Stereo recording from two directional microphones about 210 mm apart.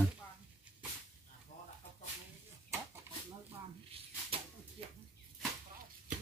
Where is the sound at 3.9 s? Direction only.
25° right (ahead or behind).